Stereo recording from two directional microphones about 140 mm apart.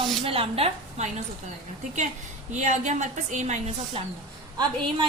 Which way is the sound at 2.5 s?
60° right (ahead or behind).